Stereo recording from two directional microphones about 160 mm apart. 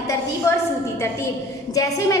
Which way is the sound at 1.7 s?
20° left (ahead or behind).